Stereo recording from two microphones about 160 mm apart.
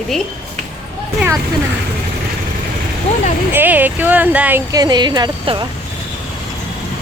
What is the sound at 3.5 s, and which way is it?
Speech, 10° right (ahead or behind).